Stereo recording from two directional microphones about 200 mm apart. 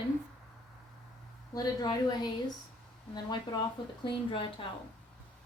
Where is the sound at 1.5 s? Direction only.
20° left (ahead or behind).